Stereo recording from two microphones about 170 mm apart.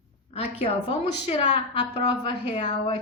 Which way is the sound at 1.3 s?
35° left (ahead or behind).